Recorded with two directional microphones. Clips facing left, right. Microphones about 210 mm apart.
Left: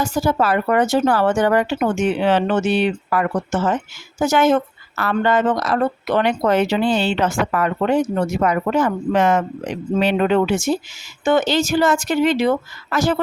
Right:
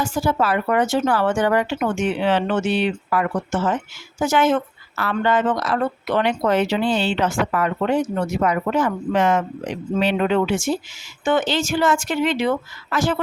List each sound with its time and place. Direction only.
0.0 s speech: 40° left (ahead or behind)